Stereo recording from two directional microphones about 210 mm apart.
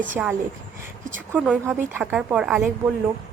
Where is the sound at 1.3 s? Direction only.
Centre (ahead or behind).